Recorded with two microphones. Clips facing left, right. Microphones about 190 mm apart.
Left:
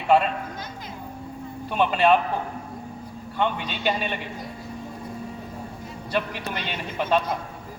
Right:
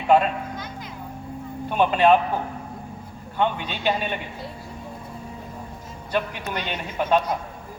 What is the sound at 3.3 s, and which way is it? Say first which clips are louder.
Speech: right 2 dB; 45° right (ahead or behind).